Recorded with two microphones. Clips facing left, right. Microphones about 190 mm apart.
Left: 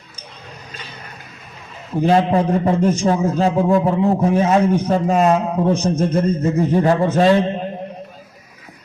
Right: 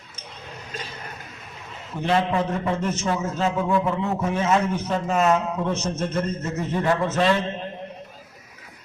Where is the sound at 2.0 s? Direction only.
40° left (ahead or behind).